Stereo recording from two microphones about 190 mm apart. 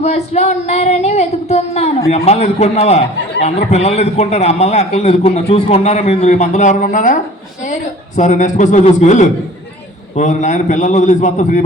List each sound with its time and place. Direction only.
0.0 s a man's voice: 35° left (ahead or behind)